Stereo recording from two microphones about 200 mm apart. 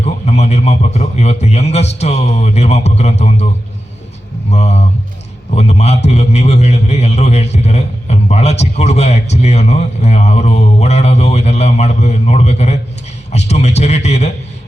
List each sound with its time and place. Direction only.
0.0 s a man's voice: 35° left (ahead or behind)
4.5 s a man's voice: 35° left (ahead or behind)